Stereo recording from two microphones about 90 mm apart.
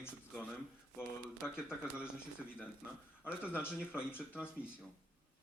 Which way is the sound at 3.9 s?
25° left (ahead or behind).